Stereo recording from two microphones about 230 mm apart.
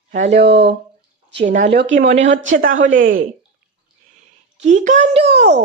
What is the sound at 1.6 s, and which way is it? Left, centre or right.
Speech, right.